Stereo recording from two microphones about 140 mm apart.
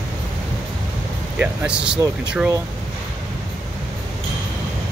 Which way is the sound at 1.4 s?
10° right (ahead or behind).